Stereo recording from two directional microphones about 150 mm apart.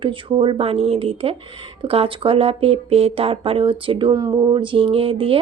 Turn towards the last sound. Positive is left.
turn(degrees=-40)  # may be behind; listen again after turning